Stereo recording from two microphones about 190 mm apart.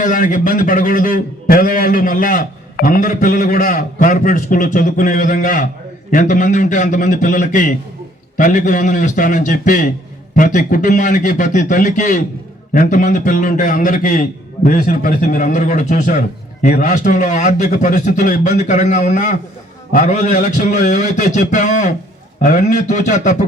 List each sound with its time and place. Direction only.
0.0 s a man's voice: 45° left (ahead or behind)